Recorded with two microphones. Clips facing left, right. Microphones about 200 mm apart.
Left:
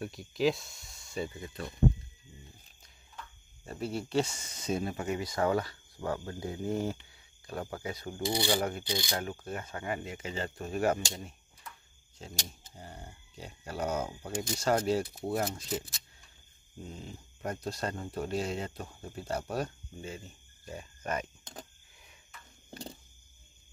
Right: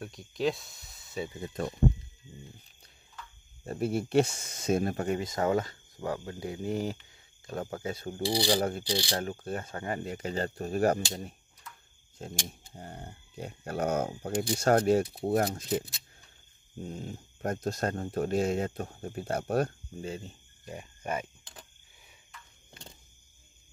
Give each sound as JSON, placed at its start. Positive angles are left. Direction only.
{"t": 0.0, "sound": "speech", "side_deg": 0}
{"t": 1.4, "sound": "speech", "side_deg": -45}
{"t": 3.6, "sound": "speech", "side_deg": -50}
{"t": 5.2, "sound": "speech", "side_deg": -20}
{"t": 12.2, "sound": "speech", "side_deg": -50}
{"t": 16.9, "sound": "speech", "side_deg": -45}
{"t": 20.0, "sound": "speech", "side_deg": -30}
{"t": 20.6, "sound": "speech", "side_deg": -15}
{"t": 22.7, "sound": "cricket", "side_deg": 35}